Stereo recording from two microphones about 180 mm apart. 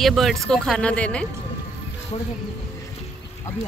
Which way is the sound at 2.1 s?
35° left (ahead or behind).